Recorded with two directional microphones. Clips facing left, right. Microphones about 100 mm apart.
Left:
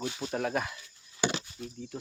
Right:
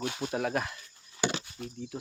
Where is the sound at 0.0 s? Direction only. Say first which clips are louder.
Right 2 dB; 60° right (ahead or behind).